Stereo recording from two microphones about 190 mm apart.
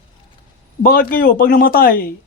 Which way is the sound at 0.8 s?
50° left (ahead or behind).